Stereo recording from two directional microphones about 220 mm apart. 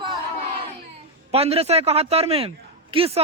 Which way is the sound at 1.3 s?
25° right (ahead or behind).